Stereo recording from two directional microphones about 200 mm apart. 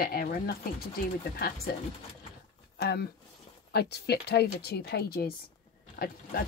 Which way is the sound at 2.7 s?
55° left (ahead or behind).